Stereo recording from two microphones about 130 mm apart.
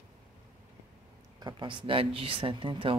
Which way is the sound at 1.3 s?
35° right (ahead or behind).